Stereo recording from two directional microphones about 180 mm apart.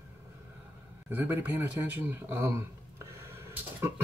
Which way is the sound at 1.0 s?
10° right (ahead or behind).